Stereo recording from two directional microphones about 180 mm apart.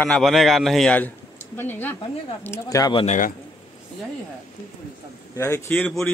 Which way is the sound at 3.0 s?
50° left (ahead or behind).